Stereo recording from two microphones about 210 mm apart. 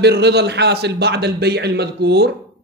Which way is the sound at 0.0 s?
50° right (ahead or behind).